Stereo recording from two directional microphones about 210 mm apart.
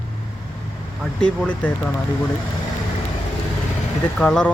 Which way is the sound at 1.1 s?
5° left (ahead or behind).